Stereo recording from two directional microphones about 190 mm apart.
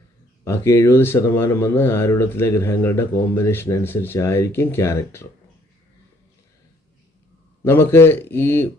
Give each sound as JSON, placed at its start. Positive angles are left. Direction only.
{"t": 0.4, "sound": "speech", "side_deg": 15}
{"t": 7.6, "sound": "speech", "side_deg": 10}